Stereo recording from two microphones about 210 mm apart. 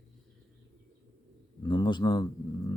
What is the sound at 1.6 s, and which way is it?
Speech, 20° left (ahead or behind).